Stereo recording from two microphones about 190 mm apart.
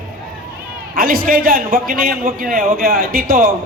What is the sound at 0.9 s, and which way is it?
A man's voice, 50° right (ahead or behind).